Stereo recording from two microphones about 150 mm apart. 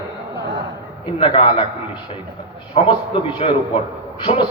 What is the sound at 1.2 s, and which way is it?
Speech, 35° left (ahead or behind).